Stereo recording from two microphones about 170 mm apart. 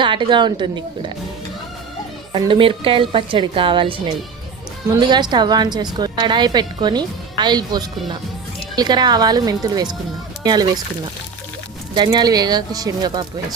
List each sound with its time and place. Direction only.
0.0 s a woman's voice: 30° right (ahead or behind)
2.3 s a woman's voice: 30° right (ahead or behind)
11.9 s a woman's voice: 25° right (ahead or behind)